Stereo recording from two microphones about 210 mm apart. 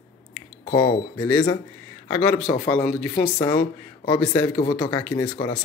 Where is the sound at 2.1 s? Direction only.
5° left (ahead or behind).